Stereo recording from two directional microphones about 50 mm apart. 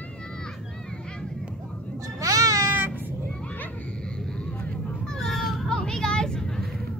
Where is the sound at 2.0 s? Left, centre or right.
Right.